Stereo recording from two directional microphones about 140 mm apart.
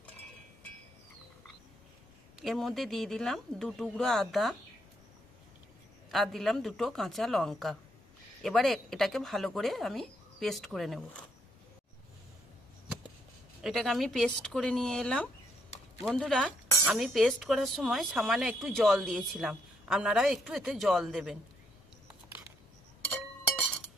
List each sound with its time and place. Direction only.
2.4 s speech: centre (ahead or behind)
6.1 s speech: centre (ahead or behind)
13.6 s speech: centre (ahead or behind)
22.0 s a sound: 15° right (ahead or behind)